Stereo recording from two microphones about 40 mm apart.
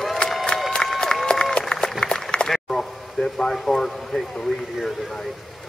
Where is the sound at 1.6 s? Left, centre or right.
Centre.